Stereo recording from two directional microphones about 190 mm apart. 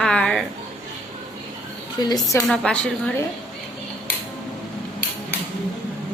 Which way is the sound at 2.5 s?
5° left (ahead or behind).